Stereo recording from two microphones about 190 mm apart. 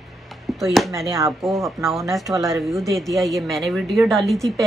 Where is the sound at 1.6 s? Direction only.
Centre (ahead or behind).